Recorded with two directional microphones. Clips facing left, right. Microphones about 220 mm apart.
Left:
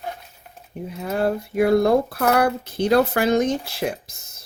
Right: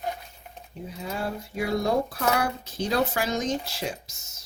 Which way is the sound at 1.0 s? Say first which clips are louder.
Left 9 dB; 60° left (ahead or behind).